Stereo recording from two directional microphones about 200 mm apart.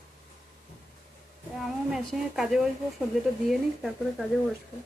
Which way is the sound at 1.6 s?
Centre (ahead or behind).